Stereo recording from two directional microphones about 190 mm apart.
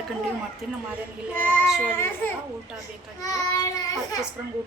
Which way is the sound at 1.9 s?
10° left (ahead or behind).